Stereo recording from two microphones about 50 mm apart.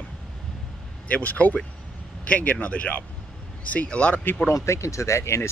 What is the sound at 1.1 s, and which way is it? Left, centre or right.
Speech, left.